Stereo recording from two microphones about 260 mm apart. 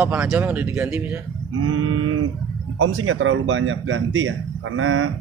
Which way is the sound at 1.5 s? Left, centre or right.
Right.